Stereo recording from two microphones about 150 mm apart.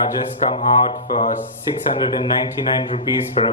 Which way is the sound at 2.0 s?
30° left (ahead or behind).